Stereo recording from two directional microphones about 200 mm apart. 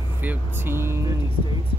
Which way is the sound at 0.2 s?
10° right (ahead or behind).